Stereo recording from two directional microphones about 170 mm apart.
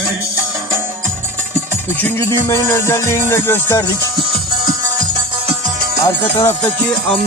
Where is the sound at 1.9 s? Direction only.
15° left (ahead or behind).